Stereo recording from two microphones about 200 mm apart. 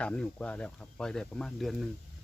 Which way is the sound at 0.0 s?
5° left (ahead or behind).